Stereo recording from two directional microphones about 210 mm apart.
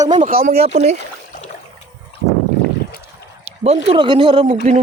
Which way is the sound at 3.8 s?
20° right (ahead or behind).